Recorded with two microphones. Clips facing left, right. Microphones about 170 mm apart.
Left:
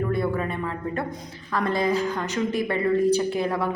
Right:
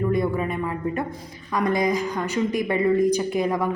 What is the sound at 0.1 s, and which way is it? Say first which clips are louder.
A woman's voice: right 2 dB; 15° right (ahead or behind).